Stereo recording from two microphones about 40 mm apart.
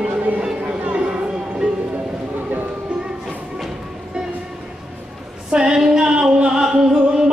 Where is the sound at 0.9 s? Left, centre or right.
Right.